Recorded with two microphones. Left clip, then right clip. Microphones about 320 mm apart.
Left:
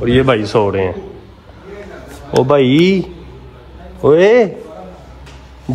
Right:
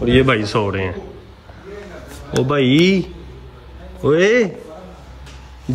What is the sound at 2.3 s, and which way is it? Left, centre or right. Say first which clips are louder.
Speech: left 6 dB; centre.